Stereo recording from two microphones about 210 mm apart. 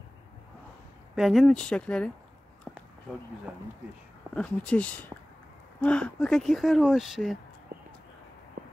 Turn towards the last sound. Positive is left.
turn(degrees=-45)  # may be behind; listen again after turning